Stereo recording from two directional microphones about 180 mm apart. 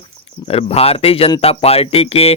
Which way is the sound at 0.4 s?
35° left (ahead or behind).